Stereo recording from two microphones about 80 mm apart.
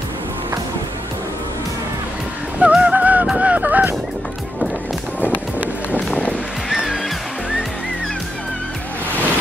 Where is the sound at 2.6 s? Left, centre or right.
Centre.